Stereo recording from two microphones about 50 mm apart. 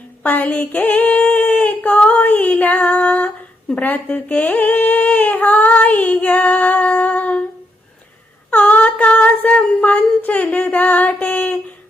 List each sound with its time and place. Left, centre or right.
0.2 s female singing: left
3.8 s speech: left
8.4 s humming: left
10.2 s a sound: left